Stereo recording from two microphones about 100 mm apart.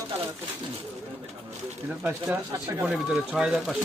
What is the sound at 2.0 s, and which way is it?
Speech, 10° right (ahead or behind).